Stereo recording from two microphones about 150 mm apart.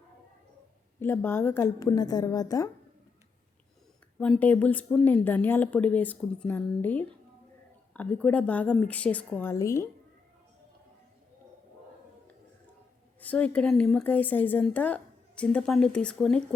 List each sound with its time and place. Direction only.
0.9 s a woman's voice: 15° left (ahead or behind)
4.2 s a woman's voice: 10° left (ahead or behind)
13.1 s a woman's voice: 10° left (ahead or behind)